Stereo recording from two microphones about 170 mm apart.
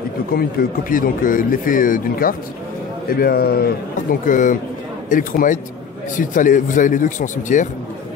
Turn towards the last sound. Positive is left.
turn(degrees=50)  # may be behind; listen again after turning